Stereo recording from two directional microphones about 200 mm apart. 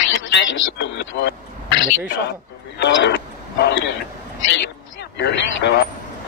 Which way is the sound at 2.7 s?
60° left (ahead or behind).